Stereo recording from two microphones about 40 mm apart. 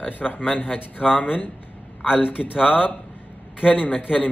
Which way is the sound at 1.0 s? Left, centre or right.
Left.